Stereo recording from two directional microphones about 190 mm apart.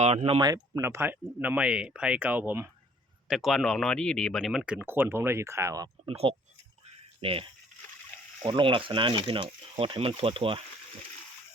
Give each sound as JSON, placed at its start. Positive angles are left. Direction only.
{"t": 0.0, "sound": "speech", "side_deg": -35}
{"t": 6.1, "sound": "speech", "side_deg": -30}